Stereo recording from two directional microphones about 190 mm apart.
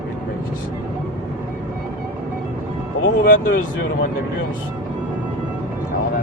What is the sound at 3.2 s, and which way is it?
Speech, 45° left (ahead or behind).